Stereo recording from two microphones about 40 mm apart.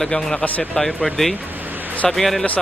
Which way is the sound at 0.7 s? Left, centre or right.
Centre.